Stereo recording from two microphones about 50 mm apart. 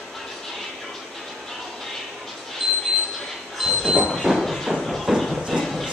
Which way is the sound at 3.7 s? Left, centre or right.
Centre.